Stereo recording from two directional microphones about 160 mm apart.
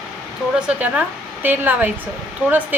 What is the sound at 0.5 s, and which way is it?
A woman's voice, 5° right (ahead or behind).